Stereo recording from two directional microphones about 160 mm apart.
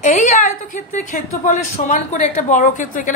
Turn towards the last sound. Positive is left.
turn(degrees=55)  # may be behind; listen again after turning